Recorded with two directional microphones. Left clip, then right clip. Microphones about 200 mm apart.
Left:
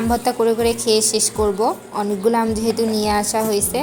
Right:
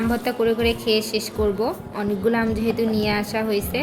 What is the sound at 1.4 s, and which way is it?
A woman's voice, 10° left (ahead or behind).